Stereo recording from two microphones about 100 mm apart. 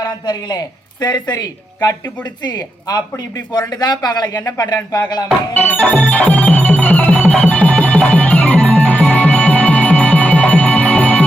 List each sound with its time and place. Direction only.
0.0 s speech: 40° left (ahead or behind)
5.5 s music: 15° left (ahead or behind)